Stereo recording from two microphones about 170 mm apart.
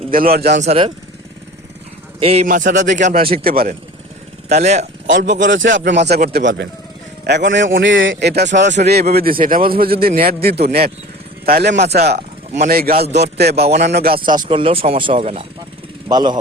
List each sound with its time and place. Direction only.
0.1 s a man's voice: 60° right (ahead or behind)
0.6 s speech: 35° right (ahead or behind)
2.2 s speech: 40° right (ahead or behind)
2.5 s speech: 50° right (ahead or behind)
3.4 s a man's voice: 60° right (ahead or behind)
4.4 s speech: 40° right (ahead or behind)
5.1 s a man's voice: 90° right
6.2 s a man's voice: 80° right
12.5 s a man's voice: 60° right (ahead or behind)
13.0 s speech: 40° right (ahead or behind)
13.2 s a man's voice: 75° right (ahead or behind)
13.7 s speech: 40° right (ahead or behind)
13.9 s a man's voice: 60° right (ahead or behind)
14.3 s speech: 30° right (ahead or behind)